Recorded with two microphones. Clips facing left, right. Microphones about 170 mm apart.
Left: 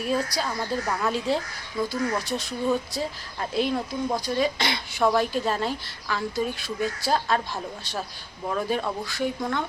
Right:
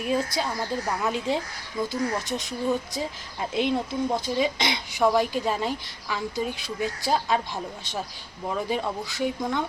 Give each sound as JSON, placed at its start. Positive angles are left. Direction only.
{"t": 0.0, "sound": "a woman's voice", "side_deg": -15}